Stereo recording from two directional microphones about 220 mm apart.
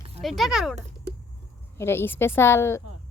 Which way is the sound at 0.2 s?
Centre (ahead or behind).